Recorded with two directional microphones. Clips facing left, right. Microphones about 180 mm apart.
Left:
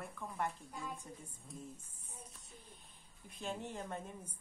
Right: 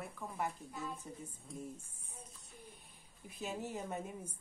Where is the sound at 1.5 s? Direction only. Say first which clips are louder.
Right 4 dB; 10° right (ahead or behind).